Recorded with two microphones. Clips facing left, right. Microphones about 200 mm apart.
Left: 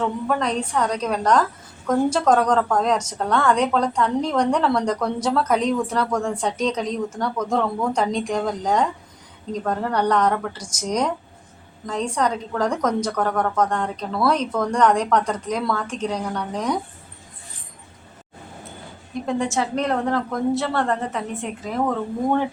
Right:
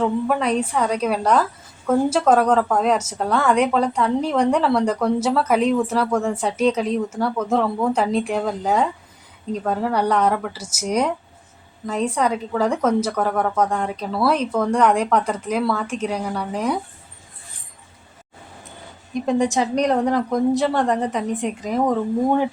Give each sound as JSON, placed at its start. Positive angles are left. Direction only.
{"t": 0.0, "sound": "a woman's voice", "side_deg": -10}
{"t": 19.2, "sound": "a woman's voice", "side_deg": -15}